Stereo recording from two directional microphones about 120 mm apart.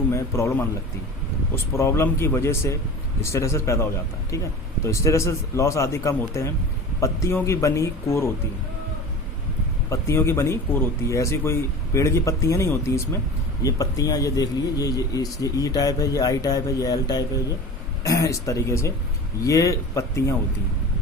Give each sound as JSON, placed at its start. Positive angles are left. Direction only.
{"t": 0.1, "sound": "speech", "side_deg": 25}
{"t": 9.9, "sound": "speech", "side_deg": 20}